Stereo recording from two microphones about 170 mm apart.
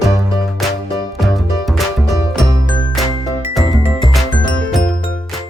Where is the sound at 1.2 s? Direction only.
Centre (ahead or behind).